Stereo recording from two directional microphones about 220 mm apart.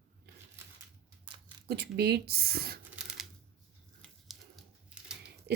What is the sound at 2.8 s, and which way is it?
Typewriter, 5° right (ahead or behind).